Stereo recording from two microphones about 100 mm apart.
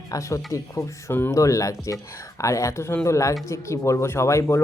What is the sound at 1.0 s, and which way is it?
Speech, 20° left (ahead or behind).